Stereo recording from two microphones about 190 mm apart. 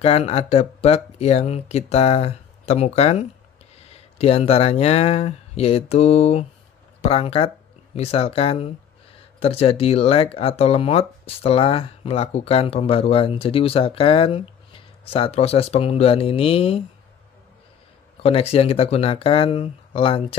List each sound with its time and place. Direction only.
0.0 s speech: 30° left (ahead or behind)
18.2 s speech: 30° left (ahead or behind)